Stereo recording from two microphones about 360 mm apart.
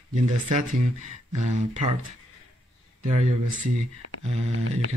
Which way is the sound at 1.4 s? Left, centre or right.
Centre.